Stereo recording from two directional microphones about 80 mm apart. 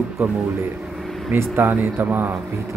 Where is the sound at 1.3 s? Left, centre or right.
Right.